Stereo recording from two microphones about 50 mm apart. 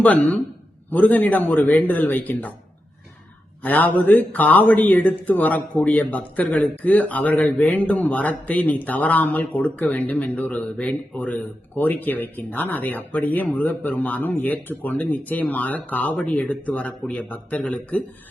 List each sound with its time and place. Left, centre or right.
0.0 s speech: left
3.6 s speech: left
16.1 s speech: left